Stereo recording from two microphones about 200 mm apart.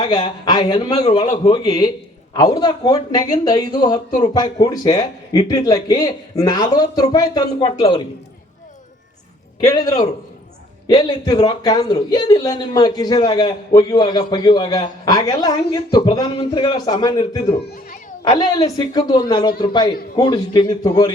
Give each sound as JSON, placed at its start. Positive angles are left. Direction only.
{"t": 0.0, "sound": "a man's voice", "side_deg": 20}
{"t": 9.6, "sound": "a man's voice", "side_deg": 20}